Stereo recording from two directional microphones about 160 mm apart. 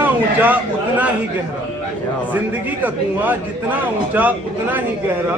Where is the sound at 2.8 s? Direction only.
10° right (ahead or behind).